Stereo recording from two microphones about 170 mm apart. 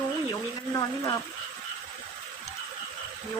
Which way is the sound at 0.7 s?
20° left (ahead or behind).